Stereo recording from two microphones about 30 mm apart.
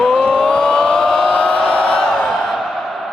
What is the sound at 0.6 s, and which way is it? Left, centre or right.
Vehicle, left.